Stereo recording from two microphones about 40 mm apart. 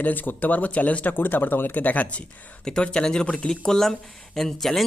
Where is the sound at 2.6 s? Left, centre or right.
Left.